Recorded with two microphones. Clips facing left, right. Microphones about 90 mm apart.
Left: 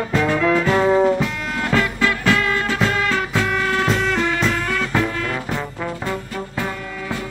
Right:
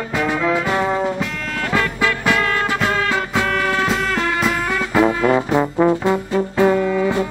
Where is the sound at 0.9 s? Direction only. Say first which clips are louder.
Left 4 dB; centre (ahead or behind).